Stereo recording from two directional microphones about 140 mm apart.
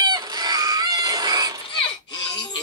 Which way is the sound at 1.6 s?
35° left (ahead or behind).